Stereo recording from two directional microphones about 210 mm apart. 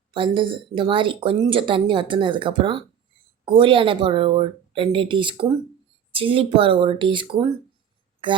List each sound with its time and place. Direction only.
0.1 s speech: 25° right (ahead or behind)